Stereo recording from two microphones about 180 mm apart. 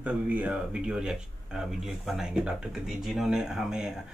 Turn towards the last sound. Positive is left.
turn(degrees=-5)  # may be behind; listen again after turning